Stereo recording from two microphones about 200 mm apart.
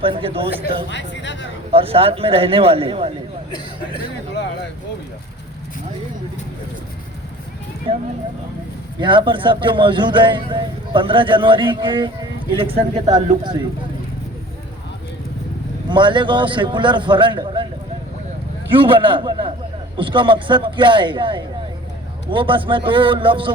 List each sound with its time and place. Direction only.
0.0 s a man's voice: 25° right (ahead or behind)
0.9 s speech: 65° left (ahead or behind)
1.7 s a man's voice: 30° right (ahead or behind)
7.9 s a man's voice: 30° right (ahead or behind)
15.9 s a man's voice: 25° right (ahead or behind)
18.7 s a man's voice: 25° right (ahead or behind)